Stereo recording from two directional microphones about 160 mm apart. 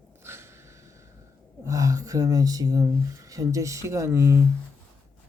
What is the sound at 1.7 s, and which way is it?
Speech, 20° right (ahead or behind).